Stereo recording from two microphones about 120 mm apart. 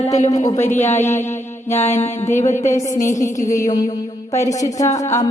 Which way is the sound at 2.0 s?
70° left (ahead or behind).